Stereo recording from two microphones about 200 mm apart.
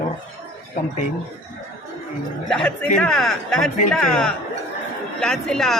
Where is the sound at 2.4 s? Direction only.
5° left (ahead or behind).